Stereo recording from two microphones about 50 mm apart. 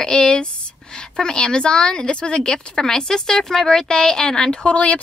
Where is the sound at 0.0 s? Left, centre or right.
Centre.